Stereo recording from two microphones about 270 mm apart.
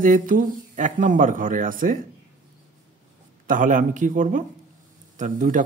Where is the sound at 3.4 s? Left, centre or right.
Right.